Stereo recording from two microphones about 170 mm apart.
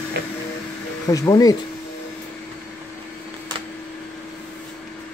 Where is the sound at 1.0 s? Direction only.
20° left (ahead or behind).